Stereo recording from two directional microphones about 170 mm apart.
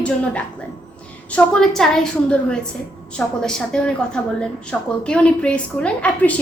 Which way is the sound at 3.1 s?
5° left (ahead or behind).